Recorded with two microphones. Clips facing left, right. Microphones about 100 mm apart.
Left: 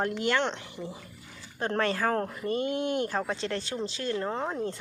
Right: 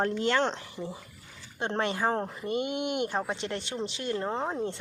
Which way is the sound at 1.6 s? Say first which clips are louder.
Left 1 dB; 25° right (ahead or behind).